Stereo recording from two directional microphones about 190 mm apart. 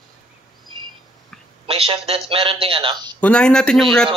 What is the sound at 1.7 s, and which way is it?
A man's voice, 30° right (ahead or behind).